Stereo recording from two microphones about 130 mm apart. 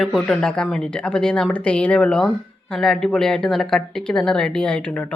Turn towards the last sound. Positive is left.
turn(degrees=10)  # may be behind; listen again after turning